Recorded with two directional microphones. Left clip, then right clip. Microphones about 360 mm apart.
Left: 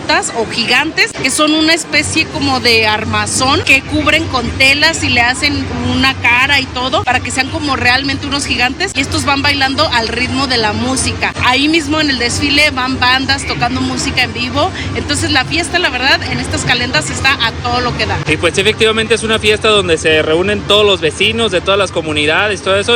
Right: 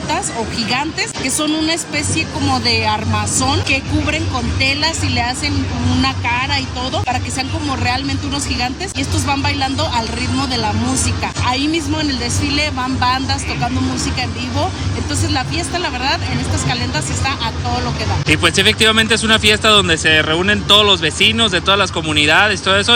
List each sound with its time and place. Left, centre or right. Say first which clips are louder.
0.1 s speech: left 7 dB; centre